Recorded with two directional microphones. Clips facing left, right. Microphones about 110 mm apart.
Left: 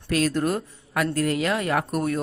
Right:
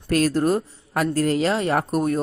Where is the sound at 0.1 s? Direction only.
40° right (ahead or behind).